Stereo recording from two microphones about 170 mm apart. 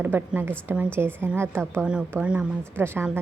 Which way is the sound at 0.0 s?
10° right (ahead or behind).